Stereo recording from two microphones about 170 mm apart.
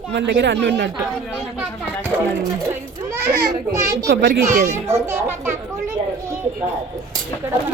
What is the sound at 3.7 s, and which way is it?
Speech, 20° right (ahead or behind).